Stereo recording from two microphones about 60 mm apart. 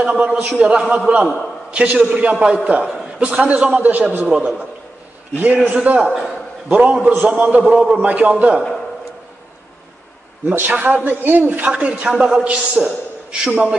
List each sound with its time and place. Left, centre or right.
0.0 s a man's voice: centre
5.5 s a man's voice: centre
10.4 s a man's voice: right
11.7 s a man's voice: centre